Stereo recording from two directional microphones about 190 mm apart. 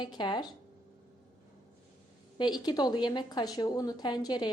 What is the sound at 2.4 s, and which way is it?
A woman's voice, 20° left (ahead or behind).